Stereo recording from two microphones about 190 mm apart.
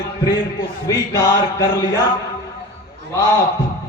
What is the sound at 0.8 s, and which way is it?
Mantra, 20° left (ahead or behind).